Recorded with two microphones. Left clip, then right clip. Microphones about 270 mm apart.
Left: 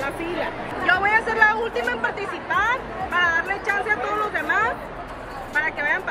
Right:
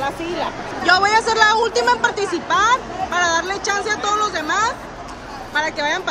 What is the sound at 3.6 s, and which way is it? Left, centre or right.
Speech, centre.